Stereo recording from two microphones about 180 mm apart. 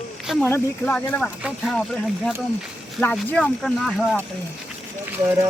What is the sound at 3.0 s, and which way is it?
Speech, 10° left (ahead or behind).